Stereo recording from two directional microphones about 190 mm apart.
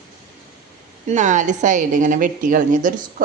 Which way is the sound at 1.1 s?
40° right (ahead or behind).